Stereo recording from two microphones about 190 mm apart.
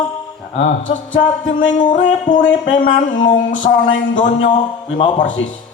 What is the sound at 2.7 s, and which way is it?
Speech, 45° left (ahead or behind).